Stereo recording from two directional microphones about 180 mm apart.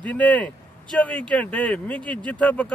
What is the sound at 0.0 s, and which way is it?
Speech, 5° left (ahead or behind).